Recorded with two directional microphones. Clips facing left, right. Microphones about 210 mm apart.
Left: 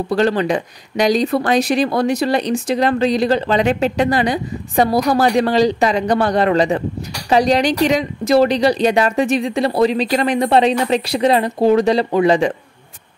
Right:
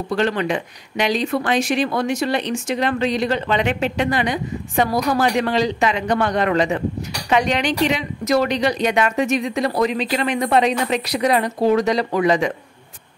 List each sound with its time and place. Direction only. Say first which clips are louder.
0.1 s speech: left 4 dB; 35° left (ahead or behind)